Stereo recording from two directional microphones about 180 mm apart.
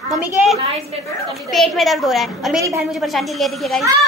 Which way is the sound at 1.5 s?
Centre (ahead or behind).